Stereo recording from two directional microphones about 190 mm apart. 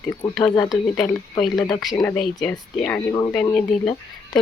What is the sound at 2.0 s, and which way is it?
Speech, 5° left (ahead or behind).